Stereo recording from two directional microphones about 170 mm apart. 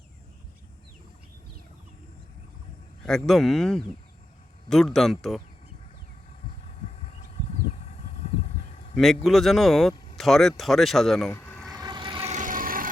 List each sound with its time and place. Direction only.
3.0 s speech: centre (ahead or behind)
7.0 s a sound: 40° left (ahead or behind)
9.0 s speech: centre (ahead or behind)
11.3 s vehicle: 15° left (ahead or behind)
11.7 s vehicle: 25° right (ahead or behind)
12.3 s vehicle: 50° right (ahead or behind)